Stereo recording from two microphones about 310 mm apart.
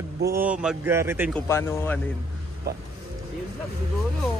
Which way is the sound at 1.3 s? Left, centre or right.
Centre.